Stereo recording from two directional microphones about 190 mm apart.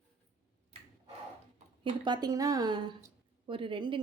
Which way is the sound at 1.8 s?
25° right (ahead or behind).